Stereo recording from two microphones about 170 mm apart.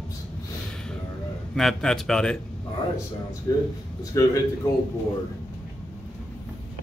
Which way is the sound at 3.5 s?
20° left (ahead or behind).